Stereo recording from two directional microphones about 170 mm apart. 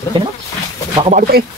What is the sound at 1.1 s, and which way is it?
Speech, 55° right (ahead or behind).